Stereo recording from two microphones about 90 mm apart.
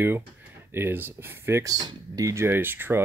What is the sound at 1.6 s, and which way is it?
Speech, 45° right (ahead or behind).